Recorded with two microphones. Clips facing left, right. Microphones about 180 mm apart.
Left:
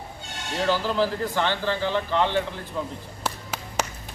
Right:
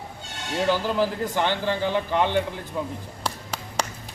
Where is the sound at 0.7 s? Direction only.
15° right (ahead or behind).